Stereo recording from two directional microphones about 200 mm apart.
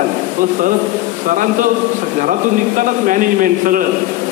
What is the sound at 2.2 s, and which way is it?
A man's voice, 40° right (ahead or behind).